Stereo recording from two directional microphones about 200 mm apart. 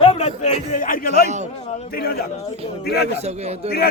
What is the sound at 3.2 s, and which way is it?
Speech, 30° right (ahead or behind).